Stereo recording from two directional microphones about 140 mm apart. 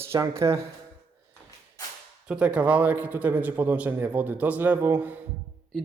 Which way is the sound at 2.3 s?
10° right (ahead or behind).